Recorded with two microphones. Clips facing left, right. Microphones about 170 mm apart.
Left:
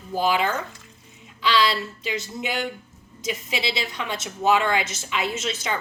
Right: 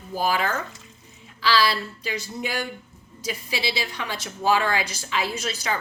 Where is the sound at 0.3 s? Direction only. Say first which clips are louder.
Left 2 dB; 20° left (ahead or behind).